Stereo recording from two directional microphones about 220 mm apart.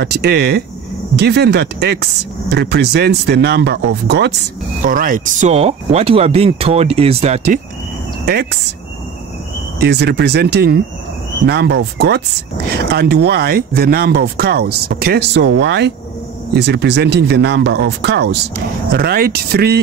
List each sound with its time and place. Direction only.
0.0 s speech: 45° right (ahead or behind)
4.8 s speech: 40° right (ahead or behind)
8.3 s speech: 45° right (ahead or behind)
9.8 s speech: 50° right (ahead or behind)